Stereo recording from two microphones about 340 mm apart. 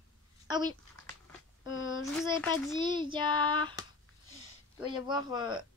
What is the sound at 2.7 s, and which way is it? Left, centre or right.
Child singing, centre.